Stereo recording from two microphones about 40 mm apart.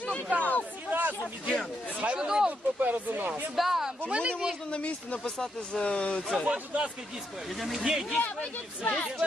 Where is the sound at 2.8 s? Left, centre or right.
Right.